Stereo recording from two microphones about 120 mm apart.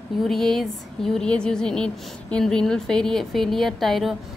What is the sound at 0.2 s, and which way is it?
A woman's voice, 5° left (ahead or behind).